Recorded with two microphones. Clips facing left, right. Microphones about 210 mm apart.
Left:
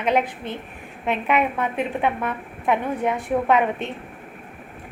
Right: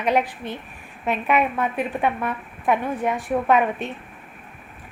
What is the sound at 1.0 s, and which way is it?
A woman's voice, 20° left (ahead or behind).